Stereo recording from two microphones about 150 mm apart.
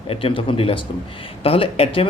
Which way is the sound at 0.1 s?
40° left (ahead or behind).